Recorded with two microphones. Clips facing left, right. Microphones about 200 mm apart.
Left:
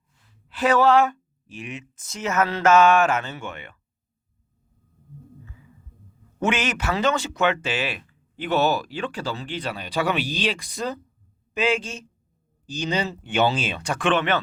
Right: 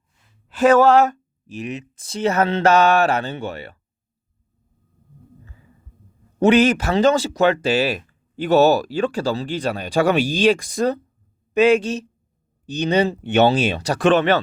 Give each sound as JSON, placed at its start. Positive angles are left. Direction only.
{"t": 0.4, "sound": "speech", "side_deg": -45}
{"t": 6.4, "sound": "speech", "side_deg": -35}
{"t": 11.5, "sound": "speech", "side_deg": -65}
{"t": 13.7, "sound": "speech", "side_deg": -35}